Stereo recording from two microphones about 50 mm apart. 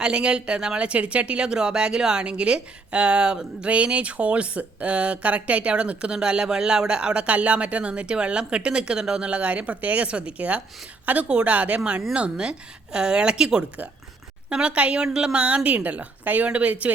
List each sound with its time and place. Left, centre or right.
0.0 s a woman's voice: centre
11.3 s speech: centre